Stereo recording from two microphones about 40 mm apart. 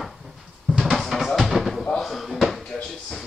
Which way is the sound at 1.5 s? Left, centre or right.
Centre.